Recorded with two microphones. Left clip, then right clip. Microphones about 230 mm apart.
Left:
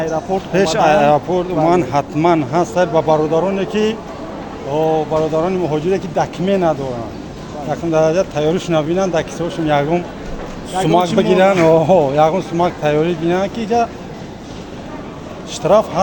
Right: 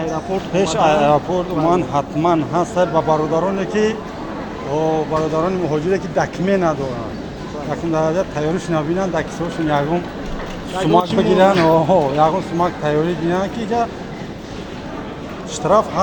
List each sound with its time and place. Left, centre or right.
0.5 s speech: left
15.6 s speech: left